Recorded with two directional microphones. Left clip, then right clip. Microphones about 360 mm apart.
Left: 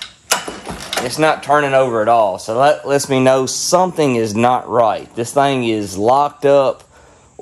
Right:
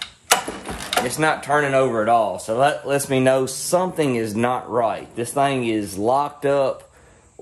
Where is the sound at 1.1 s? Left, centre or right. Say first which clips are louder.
Left 8 dB; centre.